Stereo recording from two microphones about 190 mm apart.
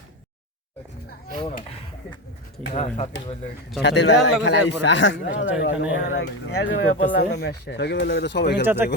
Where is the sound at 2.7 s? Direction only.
35° left (ahead or behind).